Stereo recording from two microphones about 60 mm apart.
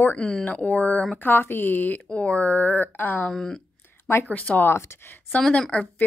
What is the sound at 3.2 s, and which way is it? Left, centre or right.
Speech, centre.